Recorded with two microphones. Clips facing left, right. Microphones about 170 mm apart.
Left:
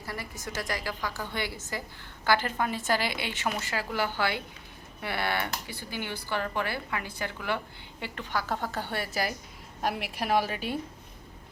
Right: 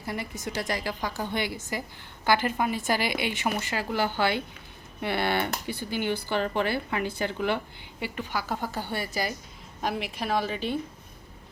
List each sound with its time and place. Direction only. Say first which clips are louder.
0.0 s a woman's voice: right 5 dB; 20° right (ahead or behind)
8.0 s a woman's voice: right 1 dB; 5° right (ahead or behind)